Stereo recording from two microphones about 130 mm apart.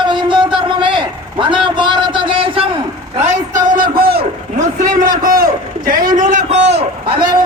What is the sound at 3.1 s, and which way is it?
A man's voice, 65° right (ahead or behind).